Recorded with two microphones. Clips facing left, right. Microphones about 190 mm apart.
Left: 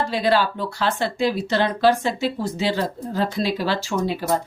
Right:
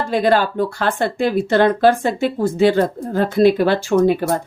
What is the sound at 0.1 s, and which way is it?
A woman's voice, 50° right (ahead or behind).